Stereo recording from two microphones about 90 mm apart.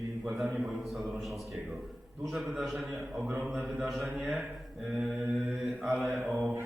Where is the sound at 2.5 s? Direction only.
5° right (ahead or behind).